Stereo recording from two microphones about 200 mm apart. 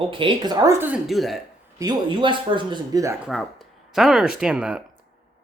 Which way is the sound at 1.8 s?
25° right (ahead or behind).